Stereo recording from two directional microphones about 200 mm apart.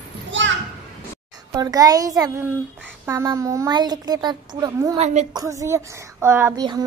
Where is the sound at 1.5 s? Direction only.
20° right (ahead or behind).